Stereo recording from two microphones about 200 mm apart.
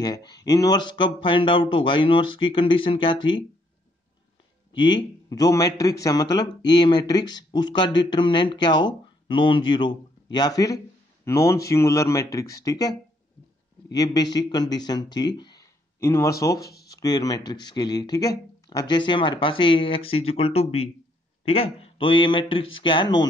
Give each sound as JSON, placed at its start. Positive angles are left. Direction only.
{"t": 0.0, "sound": "a man's voice", "side_deg": 20}
{"t": 4.7, "sound": "a man's voice", "side_deg": 20}
{"t": 13.9, "sound": "speech", "side_deg": 20}
{"t": 16.6, "sound": "a sound", "side_deg": 55}
{"t": 16.9, "sound": "a man's voice", "side_deg": 20}